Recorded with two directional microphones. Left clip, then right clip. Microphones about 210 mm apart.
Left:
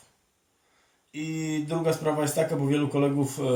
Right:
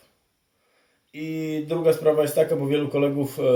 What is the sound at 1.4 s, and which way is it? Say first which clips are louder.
Speech: right 4 dB; centre (ahead or behind).